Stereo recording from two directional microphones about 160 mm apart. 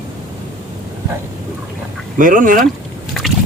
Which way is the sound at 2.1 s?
55° right (ahead or behind).